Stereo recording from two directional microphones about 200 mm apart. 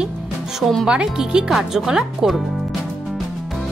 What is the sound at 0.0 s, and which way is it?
Music, centre (ahead or behind).